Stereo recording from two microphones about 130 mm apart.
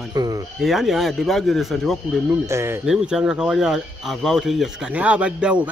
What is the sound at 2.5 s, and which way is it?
Speech, 20° right (ahead or behind).